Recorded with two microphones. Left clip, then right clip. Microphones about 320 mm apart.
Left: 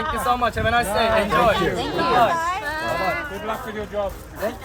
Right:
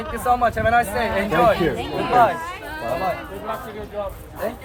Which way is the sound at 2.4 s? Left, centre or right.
Centre.